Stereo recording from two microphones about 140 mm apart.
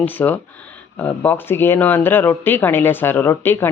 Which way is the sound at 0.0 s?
15° left (ahead or behind).